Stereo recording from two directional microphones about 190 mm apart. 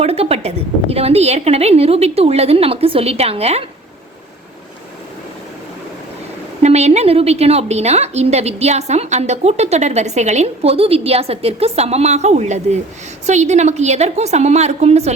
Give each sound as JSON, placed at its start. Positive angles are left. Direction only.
{"t": 0.0, "sound": "a woman's voice", "side_deg": -30}
{"t": 6.6, "sound": "a woman's voice", "side_deg": -35}